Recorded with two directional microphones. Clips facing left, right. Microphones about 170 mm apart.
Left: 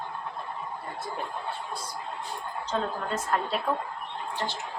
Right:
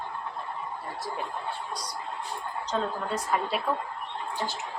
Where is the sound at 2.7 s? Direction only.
Centre (ahead or behind).